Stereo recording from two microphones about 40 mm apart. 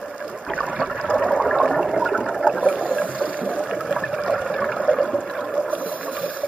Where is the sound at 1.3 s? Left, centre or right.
Centre.